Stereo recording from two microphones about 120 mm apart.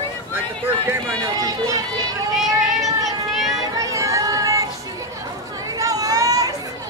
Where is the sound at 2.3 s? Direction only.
Centre (ahead or behind).